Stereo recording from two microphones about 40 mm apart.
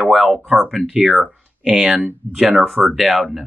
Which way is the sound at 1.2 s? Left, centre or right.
Centre.